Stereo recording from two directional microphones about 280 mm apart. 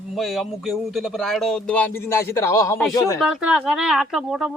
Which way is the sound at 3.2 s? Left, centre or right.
Centre.